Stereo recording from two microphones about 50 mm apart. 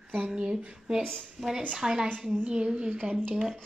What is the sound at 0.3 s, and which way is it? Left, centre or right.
Speech, centre.